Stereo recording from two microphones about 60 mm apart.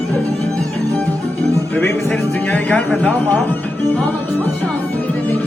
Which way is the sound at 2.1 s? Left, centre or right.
Left.